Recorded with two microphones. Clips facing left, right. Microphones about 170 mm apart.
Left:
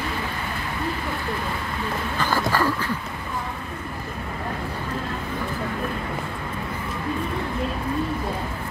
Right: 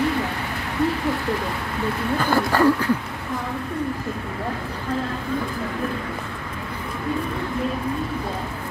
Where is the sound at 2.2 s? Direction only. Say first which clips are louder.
Right 5 dB; 60° right (ahead or behind).